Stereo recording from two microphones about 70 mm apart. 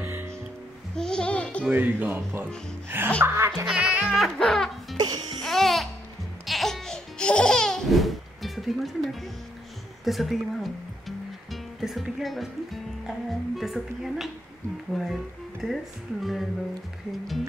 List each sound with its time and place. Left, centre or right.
0.0 s music: right
0.9 s music: centre
1.7 s speech: right
3.2 s music: right
3.7 s speech: centre
4.4 s music: centre
4.9 s music: right
5.4 s music: centre
6.4 s laughter: centre
10.0 s speech: centre